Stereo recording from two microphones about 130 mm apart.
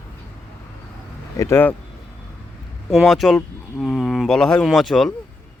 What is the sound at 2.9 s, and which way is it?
Speech, centre (ahead or behind).